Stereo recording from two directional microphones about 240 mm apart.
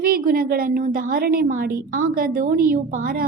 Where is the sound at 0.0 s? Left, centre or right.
Right.